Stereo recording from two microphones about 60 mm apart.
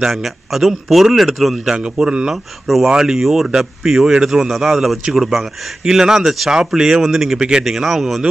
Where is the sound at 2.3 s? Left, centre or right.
Centre.